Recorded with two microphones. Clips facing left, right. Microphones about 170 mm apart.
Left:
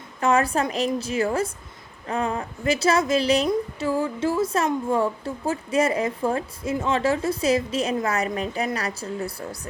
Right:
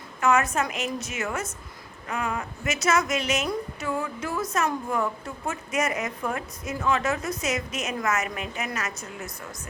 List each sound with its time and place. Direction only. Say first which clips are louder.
0.2 s a woman's voice: left 2 dB; 30° left (ahead or behind)